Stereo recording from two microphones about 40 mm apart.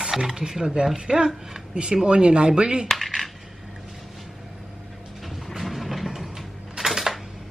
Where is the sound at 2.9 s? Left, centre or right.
Centre.